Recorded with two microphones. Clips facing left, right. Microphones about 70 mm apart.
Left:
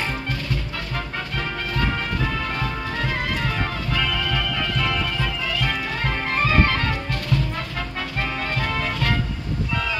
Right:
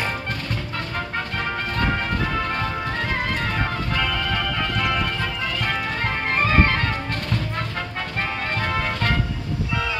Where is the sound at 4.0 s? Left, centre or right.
Right.